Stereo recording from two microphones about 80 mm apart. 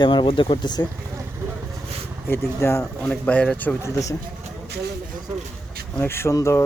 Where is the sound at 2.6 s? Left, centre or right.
Left.